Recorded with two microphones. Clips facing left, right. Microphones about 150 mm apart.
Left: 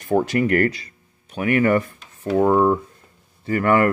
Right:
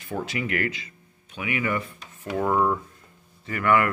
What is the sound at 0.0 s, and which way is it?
Speech, 45° left (ahead or behind).